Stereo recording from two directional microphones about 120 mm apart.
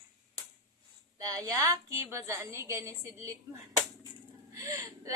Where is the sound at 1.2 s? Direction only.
30° right (ahead or behind).